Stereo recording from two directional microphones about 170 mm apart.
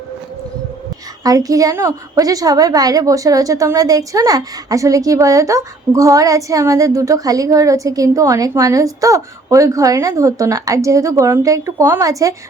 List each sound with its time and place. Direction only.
1.2 s a woman's voice: 20° right (ahead or behind)